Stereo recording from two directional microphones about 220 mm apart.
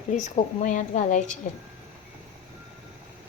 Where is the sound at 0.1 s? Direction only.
35° left (ahead or behind).